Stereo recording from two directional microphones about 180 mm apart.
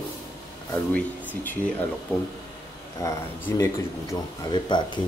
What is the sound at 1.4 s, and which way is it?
Speech, 10° left (ahead or behind).